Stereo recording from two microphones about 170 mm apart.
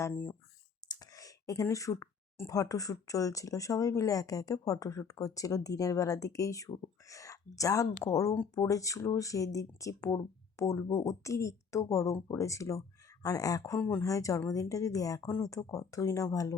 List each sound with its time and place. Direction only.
0.0 s speech: 10° left (ahead or behind)